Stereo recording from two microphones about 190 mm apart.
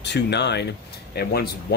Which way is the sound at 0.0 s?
65° left (ahead or behind).